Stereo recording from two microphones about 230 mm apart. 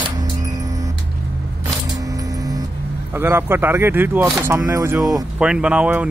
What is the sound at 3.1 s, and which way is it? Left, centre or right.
Speech, centre.